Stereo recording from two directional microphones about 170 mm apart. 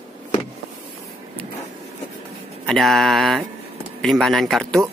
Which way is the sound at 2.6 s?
Centre (ahead or behind).